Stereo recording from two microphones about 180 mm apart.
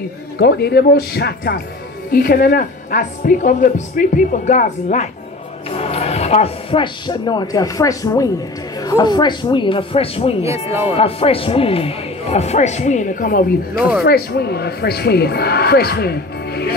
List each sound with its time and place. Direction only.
0.4 s a woman's voice: 65° left (ahead or behind); by 5.0 s 45° left (ahead or behind)
5.7 s speech: 35° left (ahead or behind); by 16.7 s 60° left (ahead or behind)